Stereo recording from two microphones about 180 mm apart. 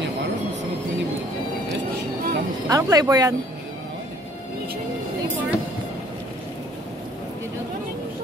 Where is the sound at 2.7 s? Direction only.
20° right (ahead or behind).